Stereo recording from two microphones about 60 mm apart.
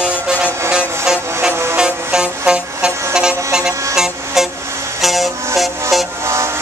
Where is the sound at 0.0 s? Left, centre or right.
Centre.